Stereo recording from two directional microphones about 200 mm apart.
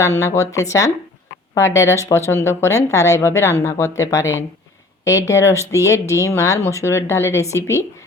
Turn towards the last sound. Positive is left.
turn(degrees=15)  # may be behind; listen again after turning